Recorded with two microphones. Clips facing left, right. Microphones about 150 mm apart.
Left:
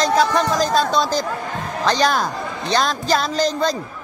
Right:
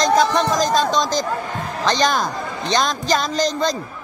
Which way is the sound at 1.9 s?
10° left (ahead or behind).